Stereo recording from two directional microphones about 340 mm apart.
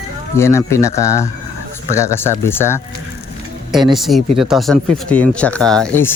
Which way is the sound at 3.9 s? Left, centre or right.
Centre.